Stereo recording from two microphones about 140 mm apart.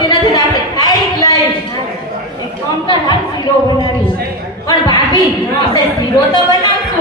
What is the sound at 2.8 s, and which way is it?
Speech, 30° left (ahead or behind).